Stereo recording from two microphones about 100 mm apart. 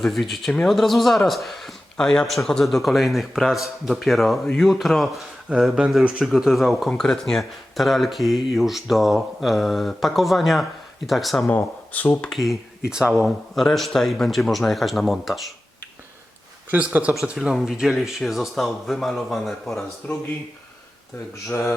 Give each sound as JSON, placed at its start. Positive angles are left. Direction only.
{"t": 0.0, "sound": "speech", "side_deg": 0}
{"t": 11.4, "sound": "speech", "side_deg": 15}
{"t": 12.3, "sound": "speech", "side_deg": 0}
{"t": 16.7, "sound": "speech", "side_deg": -15}
{"t": 20.0, "sound": "speech", "side_deg": 15}
{"t": 21.4, "sound": "speech", "side_deg": 25}